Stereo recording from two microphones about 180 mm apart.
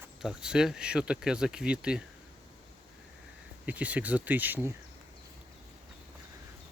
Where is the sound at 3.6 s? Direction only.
10° right (ahead or behind).